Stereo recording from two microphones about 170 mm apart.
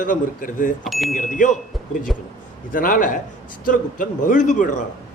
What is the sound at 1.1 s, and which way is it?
Speech, 50° left (ahead or behind).